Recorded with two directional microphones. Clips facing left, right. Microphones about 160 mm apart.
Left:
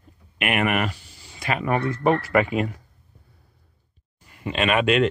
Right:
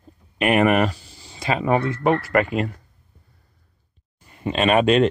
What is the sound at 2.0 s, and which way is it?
Speech, centre (ahead or behind).